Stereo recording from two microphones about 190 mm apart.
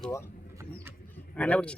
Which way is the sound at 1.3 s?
5° left (ahead or behind).